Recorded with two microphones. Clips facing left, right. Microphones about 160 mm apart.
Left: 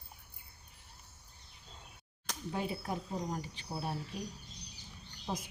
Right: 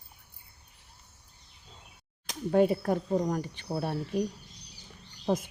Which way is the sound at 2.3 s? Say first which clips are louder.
Right 13 dB; 60° right (ahead or behind).